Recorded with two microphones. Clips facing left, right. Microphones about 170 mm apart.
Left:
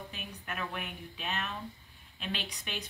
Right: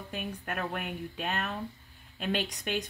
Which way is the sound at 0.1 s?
50° right (ahead or behind).